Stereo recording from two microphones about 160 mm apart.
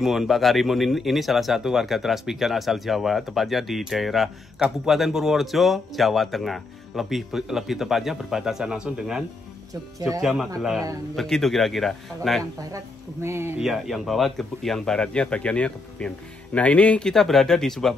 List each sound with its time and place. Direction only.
0.0 s speech: centre (ahead or behind)
9.9 s speech: 20° right (ahead or behind)
10.2 s speech: centre (ahead or behind)
12.7 s speech: 15° right (ahead or behind)
13.6 s speech: centre (ahead or behind)